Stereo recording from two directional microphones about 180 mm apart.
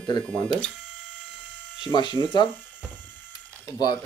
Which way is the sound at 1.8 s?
25° left (ahead or behind).